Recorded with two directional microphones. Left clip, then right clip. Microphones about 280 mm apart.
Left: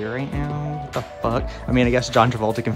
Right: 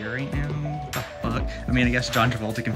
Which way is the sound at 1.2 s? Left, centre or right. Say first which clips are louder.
Left 6 dB; centre.